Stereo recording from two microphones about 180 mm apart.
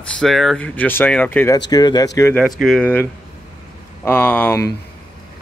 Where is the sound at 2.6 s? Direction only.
5° left (ahead or behind).